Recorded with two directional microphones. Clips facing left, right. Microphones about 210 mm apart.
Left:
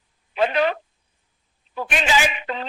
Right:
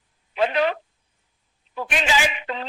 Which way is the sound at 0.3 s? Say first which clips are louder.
Left 1 dB; 50° left (ahead or behind).